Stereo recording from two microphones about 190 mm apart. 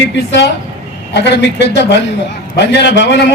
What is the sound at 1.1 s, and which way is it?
A man's voice, 65° left (ahead or behind).